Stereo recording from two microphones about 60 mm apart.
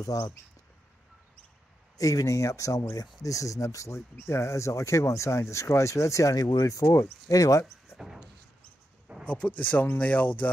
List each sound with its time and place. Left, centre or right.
0.1 s speech: left
2.0 s speech: left
8.0 s a sound: centre
9.2 s speech: left